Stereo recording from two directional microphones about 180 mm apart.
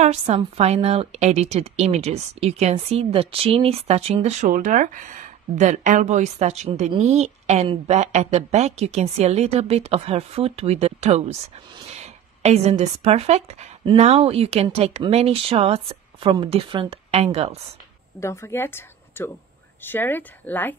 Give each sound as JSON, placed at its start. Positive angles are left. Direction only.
{"t": 0.0, "sound": "a woman's voice", "side_deg": -35}
{"t": 18.2, "sound": "speech", "side_deg": 15}